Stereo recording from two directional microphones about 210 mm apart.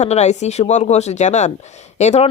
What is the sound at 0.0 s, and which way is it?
Speech, 30° left (ahead or behind).